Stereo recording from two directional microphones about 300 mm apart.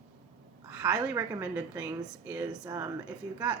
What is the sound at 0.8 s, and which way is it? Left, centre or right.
Speech, centre.